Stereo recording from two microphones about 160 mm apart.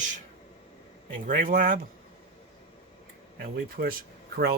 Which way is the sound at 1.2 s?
55° right (ahead or behind).